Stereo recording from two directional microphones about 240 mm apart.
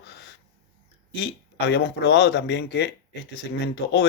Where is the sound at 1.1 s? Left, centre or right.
Left.